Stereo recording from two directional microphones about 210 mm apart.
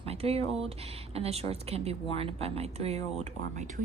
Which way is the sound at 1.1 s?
30° right (ahead or behind).